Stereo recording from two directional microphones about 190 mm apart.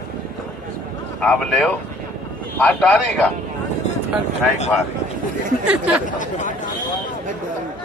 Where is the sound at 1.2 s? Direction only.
5° left (ahead or behind).